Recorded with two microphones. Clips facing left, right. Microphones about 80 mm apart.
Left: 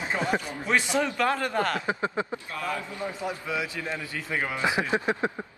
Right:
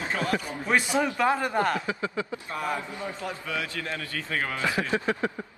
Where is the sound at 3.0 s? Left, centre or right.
Centre.